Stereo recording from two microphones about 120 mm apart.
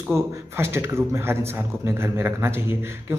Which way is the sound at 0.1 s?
20° right (ahead or behind).